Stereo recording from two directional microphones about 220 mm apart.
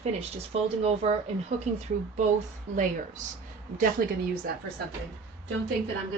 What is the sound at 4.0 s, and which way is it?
Speech, 45° right (ahead or behind).